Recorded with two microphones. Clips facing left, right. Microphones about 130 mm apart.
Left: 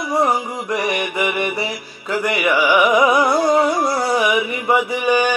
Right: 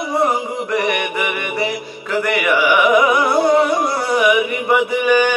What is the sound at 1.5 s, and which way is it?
Mantra, 20° right (ahead or behind).